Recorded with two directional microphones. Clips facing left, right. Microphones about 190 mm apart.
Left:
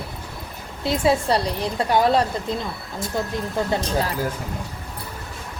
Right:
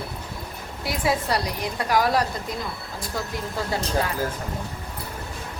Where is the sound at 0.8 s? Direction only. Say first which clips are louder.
Left 5 dB; 25° left (ahead or behind).